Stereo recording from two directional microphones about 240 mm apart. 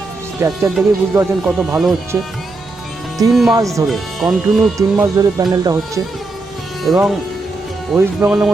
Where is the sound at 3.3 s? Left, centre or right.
Centre.